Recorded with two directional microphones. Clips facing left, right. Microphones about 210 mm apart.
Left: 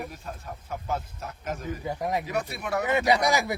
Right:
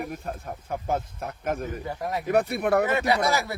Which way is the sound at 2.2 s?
55° right (ahead or behind).